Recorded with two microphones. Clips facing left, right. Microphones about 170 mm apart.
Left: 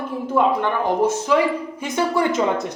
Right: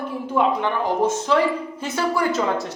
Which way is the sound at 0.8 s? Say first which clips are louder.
Left 2 dB; 10° left (ahead or behind).